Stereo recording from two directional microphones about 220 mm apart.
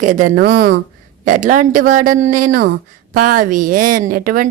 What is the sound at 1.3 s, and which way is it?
A woman's voice, 35° right (ahead or behind).